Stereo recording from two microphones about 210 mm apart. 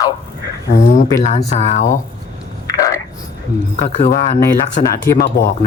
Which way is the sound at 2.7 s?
15° left (ahead or behind).